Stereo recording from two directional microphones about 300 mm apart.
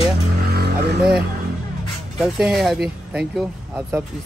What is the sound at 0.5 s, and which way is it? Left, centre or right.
Vehicle, right.